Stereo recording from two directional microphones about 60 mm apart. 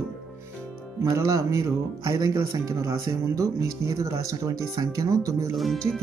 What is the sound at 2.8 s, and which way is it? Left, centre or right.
Speech, right.